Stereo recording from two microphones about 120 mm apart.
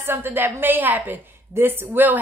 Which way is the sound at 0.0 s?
20° right (ahead or behind).